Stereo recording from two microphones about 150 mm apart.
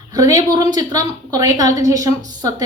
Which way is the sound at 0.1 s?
25° right (ahead or behind).